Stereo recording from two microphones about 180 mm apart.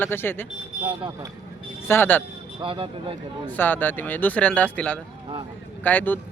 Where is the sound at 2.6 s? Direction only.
30° right (ahead or behind).